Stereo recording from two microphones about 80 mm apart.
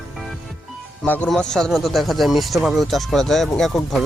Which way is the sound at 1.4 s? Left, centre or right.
Centre.